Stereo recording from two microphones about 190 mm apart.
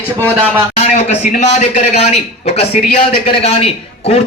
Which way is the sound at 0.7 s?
35° left (ahead or behind).